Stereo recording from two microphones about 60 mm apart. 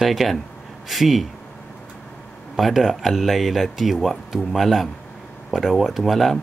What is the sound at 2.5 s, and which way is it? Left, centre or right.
Speech, centre.